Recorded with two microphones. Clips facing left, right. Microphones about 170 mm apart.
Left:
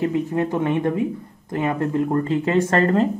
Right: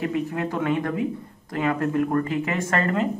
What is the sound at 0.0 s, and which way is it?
Speech, 25° left (ahead or behind).